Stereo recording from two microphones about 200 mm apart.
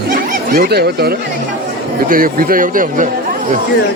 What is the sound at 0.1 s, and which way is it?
Snicker, 45° right (ahead or behind).